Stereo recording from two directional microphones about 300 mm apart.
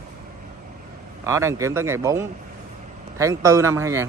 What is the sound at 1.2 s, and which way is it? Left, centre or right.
A man's voice, centre.